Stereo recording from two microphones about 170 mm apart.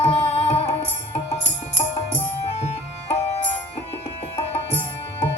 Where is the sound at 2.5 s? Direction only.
40° left (ahead or behind).